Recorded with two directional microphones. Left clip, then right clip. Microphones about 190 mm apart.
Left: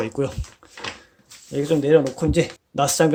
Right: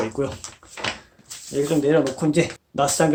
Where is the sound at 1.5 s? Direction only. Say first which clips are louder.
Left 2 dB; 40° left (ahead or behind).